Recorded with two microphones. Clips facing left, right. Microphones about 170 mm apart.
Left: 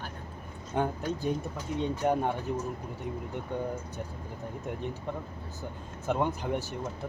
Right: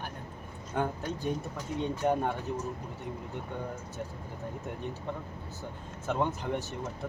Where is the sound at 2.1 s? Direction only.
15° left (ahead or behind).